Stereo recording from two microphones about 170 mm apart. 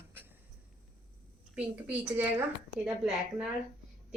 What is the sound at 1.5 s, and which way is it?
Speech, 10° right (ahead or behind).